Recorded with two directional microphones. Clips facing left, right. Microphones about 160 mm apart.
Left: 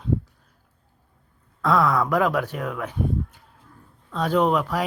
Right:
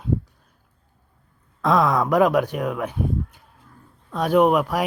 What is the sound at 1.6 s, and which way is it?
Speech, 20° right (ahead or behind).